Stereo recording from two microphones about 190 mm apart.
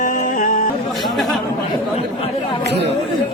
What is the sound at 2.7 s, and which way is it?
Speech, 60° right (ahead or behind).